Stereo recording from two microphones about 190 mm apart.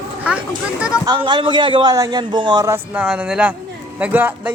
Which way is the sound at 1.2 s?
25° right (ahead or behind).